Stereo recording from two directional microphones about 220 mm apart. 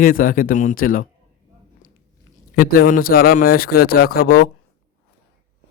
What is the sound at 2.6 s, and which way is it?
A man's voice, 40° left (ahead or behind).